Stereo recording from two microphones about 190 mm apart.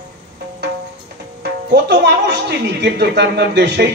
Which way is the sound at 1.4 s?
60° right (ahead or behind).